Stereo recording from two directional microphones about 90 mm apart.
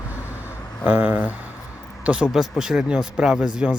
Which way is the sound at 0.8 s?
20° right (ahead or behind).